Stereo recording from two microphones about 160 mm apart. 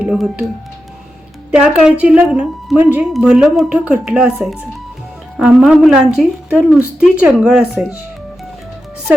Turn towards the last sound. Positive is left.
turn(degrees=-5)  # may be behind; listen again after turning